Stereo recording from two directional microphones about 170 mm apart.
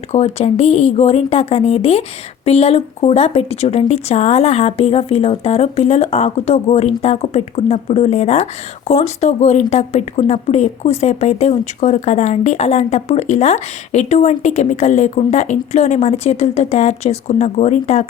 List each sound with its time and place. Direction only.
0.1 s speech: 40° left (ahead or behind)